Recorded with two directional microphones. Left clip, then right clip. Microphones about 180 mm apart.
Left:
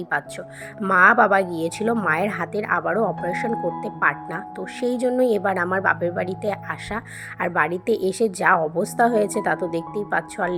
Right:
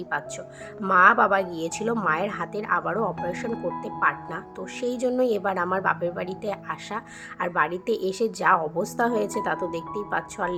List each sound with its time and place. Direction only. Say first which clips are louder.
0.1 s a woman's voice: left 4 dB; 20° left (ahead or behind)